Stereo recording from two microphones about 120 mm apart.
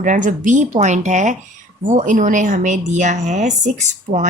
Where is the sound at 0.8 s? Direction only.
80° right.